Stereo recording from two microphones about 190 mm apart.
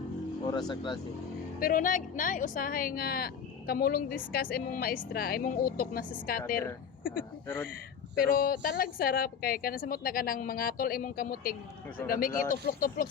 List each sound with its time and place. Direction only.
0.4 s speech: 25° left (ahead or behind)
1.5 s a woman's voice: 45° left (ahead or behind)
7.4 s speech: 10° left (ahead or behind)
8.1 s a woman's voice: 50° left (ahead or behind)